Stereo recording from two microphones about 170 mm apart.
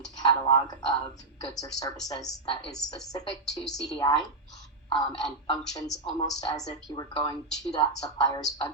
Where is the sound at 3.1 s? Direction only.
20° left (ahead or behind).